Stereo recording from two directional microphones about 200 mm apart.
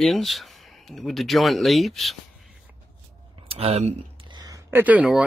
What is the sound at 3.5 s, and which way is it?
Speech, 30° right (ahead or behind).